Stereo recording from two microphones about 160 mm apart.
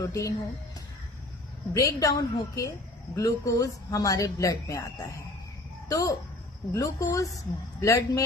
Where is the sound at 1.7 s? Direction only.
20° left (ahead or behind).